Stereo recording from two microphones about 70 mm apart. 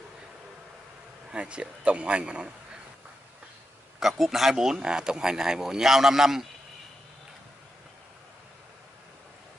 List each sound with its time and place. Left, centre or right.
1.3 s speech: centre
4.0 s speech: centre